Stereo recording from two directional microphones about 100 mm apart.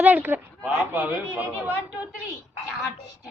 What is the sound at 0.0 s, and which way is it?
Speech, 15° right (ahead or behind).